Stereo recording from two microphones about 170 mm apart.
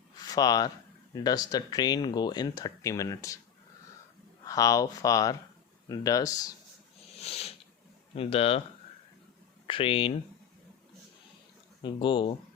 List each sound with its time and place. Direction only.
0.2 s speech: 20° left (ahead or behind)
4.4 s speech: 20° left (ahead or behind)
7.2 s a sound: 35° left (ahead or behind)
8.1 s speech: 35° left (ahead or behind)
9.6 s speech: 30° left (ahead or behind)
11.8 s speech: 30° left (ahead or behind)